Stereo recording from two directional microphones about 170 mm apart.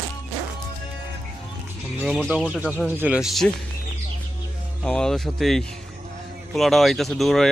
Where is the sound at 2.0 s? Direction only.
5° right (ahead or behind).